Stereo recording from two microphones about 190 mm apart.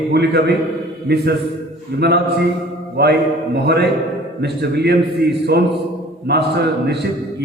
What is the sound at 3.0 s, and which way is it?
A man's voice, 60° right (ahead or behind).